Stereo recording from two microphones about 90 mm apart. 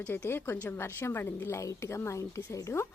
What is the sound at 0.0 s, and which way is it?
A woman's voice, 20° left (ahead or behind).